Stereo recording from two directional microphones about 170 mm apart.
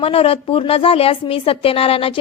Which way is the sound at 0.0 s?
35° left (ahead or behind).